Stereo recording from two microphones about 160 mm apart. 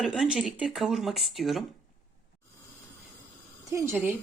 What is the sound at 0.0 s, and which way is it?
Speech, 5° right (ahead or behind).